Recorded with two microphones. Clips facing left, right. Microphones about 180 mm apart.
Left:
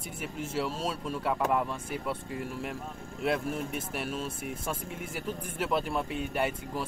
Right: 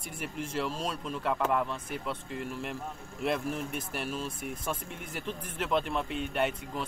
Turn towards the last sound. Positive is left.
turn(degrees=5)  # may be behind; listen again after turning